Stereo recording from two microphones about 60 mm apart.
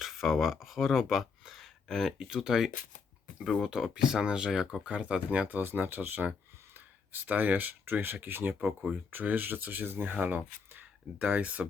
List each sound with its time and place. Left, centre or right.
0.0 s speech: centre
3.4 s speech: centre
3.9 s speech: centre
5.5 s speech: right
11.2 s speech: centre